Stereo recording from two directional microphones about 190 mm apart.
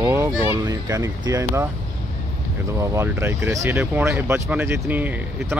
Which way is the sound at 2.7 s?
15° right (ahead or behind).